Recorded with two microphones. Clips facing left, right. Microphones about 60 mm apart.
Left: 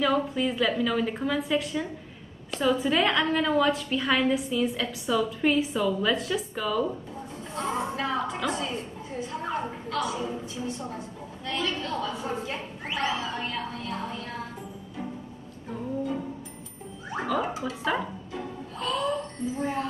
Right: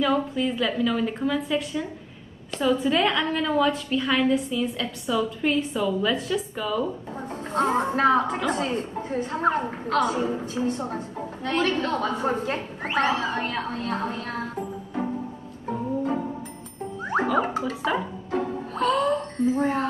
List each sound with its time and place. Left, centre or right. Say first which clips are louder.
0.0 s a woman's voice: right 2 dB; centre
7.2 s a woman's voice: right 9 dB; right
17.4 s a woman's voice: right 5 dB; right
18.3 s music: right 9 dB; right